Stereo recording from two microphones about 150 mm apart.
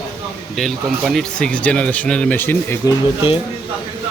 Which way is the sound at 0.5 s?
Centre (ahead or behind).